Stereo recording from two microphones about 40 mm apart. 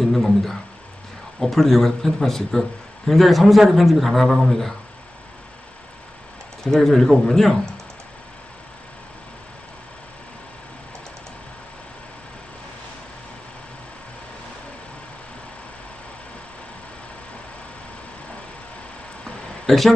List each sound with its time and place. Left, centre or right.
0.0 s a man's voice: centre
6.6 s a man's voice: centre
19.7 s speech: centre